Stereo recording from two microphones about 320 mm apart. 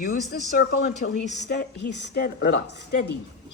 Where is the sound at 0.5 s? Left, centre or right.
Left.